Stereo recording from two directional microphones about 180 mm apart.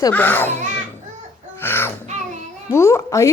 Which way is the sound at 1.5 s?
10° left (ahead or behind).